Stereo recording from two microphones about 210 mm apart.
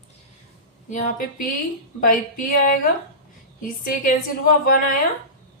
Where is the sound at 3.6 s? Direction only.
40° left (ahead or behind).